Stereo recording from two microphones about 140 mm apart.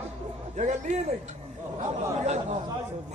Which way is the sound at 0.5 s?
60° right (ahead or behind).